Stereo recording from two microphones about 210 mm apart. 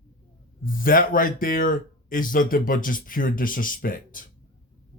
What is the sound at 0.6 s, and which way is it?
Speech, 40° left (ahead or behind).